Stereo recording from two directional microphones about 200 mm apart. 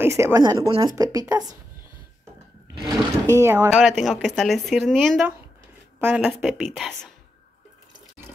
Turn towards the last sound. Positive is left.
turn(degrees=0)  # may be behind; listen again after turning